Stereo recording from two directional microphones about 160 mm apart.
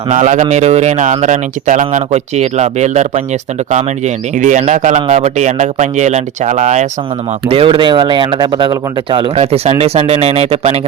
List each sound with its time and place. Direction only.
0.1 s speech: 45° right (ahead or behind)
7.4 s speech: 35° right (ahead or behind)